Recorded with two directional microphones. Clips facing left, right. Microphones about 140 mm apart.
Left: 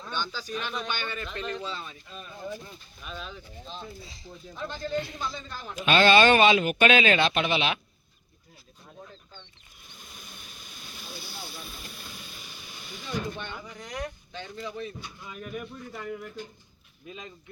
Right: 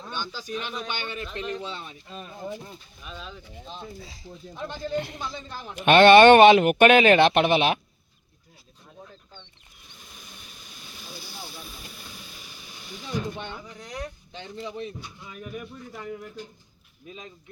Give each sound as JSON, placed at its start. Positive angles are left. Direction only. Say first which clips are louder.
{"t": 0.0, "sound": "speech", "louder": "left 1 dB", "side_deg": -15}
{"t": 2.0, "sound": "speech", "louder": "right 4 dB", "side_deg": -35}
{"t": 2.3, "sound": "speech", "louder": "right 1 dB", "side_deg": -20}
{"t": 3.0, "sound": "speech", "louder": "left 1 dB", "side_deg": 0}
{"t": 4.3, "sound": "speech", "louder": "right 1 dB", "side_deg": -15}
{"t": 5.7, "sound": "speech", "louder": "right 7 dB", "side_deg": -60}
{"t": 10.1, "sound": "vehicle", "louder": "even", "side_deg": 0}
{"t": 13.1, "sound": "speech", "louder": "right 2 dB", "side_deg": -15}
{"t": 13.7, "sound": "speech", "louder": "even", "side_deg": 0}
{"t": 14.3, "sound": "speech", "louder": "right 3 dB", "side_deg": -20}
{"t": 15.0, "sound": "speech", "louder": "even", "side_deg": 0}